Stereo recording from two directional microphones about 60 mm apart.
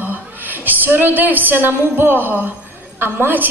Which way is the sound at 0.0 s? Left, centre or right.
Right.